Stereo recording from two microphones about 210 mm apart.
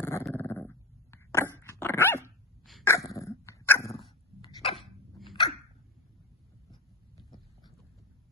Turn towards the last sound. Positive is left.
turn(degrees=20)  # may be behind; listen again after turning